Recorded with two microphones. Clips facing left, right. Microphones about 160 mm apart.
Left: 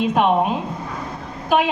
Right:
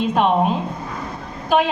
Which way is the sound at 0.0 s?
5° left (ahead or behind).